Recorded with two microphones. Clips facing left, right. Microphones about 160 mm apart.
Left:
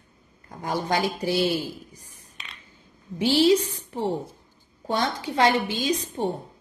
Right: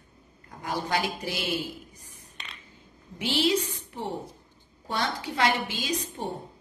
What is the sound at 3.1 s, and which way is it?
A woman's voice, 30° left (ahead or behind).